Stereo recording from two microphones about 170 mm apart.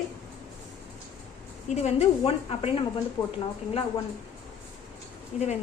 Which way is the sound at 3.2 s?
20° left (ahead or behind).